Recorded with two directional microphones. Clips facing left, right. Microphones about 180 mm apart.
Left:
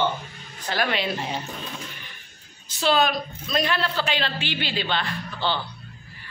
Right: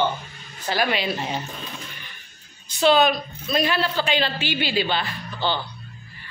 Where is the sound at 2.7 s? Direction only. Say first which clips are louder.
Right 4 dB; centre (ahead or behind).